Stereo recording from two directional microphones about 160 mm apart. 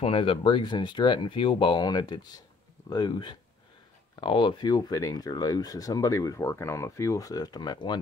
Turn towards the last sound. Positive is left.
turn(degrees=25)  # may be behind; listen again after turning